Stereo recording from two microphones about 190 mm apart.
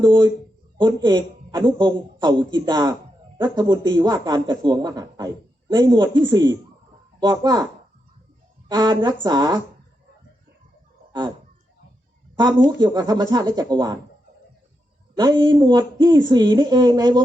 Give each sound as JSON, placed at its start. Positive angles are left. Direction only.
{"t": 0.0, "sound": "speech", "side_deg": -25}
{"t": 8.7, "sound": "speech", "side_deg": -20}
{"t": 12.4, "sound": "speech", "side_deg": -25}
{"t": 15.1, "sound": "speech", "side_deg": -20}